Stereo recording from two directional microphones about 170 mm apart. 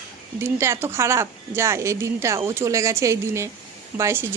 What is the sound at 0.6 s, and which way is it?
Speech, 15° right (ahead or behind).